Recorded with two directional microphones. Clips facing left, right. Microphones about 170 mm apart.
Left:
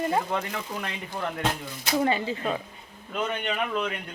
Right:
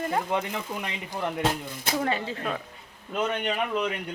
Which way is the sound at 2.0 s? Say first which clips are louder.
Left 4 dB; centre (ahead or behind).